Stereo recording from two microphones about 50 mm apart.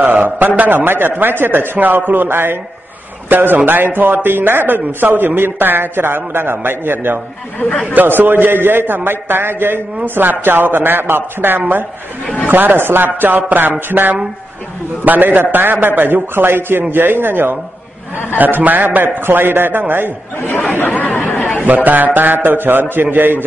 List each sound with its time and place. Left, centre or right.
0.0 s speech: right
7.9 s speech: right
20.3 s speech: left
20.6 s speech: left
21.5 s speech: right